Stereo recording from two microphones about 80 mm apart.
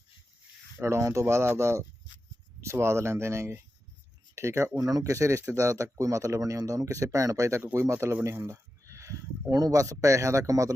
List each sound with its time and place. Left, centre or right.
0.8 s speech: right